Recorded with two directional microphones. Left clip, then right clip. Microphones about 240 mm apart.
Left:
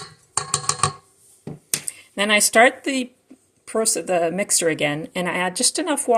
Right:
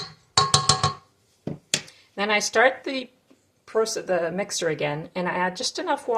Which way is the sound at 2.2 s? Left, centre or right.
Left.